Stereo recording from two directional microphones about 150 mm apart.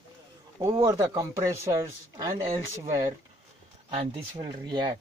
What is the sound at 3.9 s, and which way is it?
Speech, 35° right (ahead or behind).